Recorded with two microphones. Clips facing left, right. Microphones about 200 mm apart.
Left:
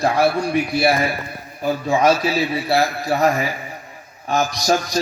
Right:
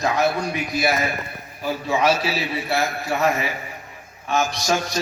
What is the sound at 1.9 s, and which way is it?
A man's voice, 45° left (ahead or behind).